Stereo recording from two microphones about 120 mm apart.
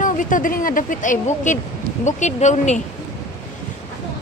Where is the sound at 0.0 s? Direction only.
90° left; by 2.8 s 75° left (ahead or behind).